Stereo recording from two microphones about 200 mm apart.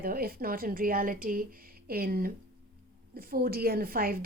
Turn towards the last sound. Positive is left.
turn(degrees=-45)  # may be behind; listen again after turning